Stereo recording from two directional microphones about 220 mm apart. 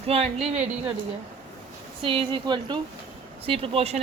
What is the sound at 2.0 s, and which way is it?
Speech, 25° right (ahead or behind).